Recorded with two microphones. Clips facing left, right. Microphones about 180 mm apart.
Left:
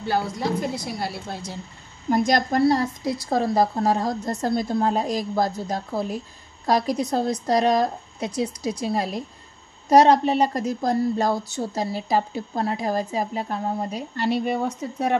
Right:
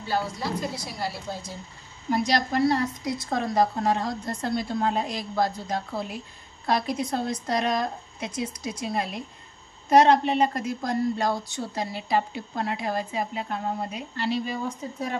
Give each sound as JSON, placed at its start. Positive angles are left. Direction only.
{"t": 0.0, "sound": "a woman's voice", "side_deg": 55}
{"t": 2.0, "sound": "a woman's voice", "side_deg": 50}
{"t": 2.6, "sound": "a woman's voice", "side_deg": 30}